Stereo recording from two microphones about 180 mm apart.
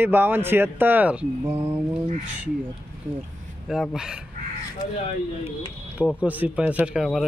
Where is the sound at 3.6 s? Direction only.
Centre (ahead or behind).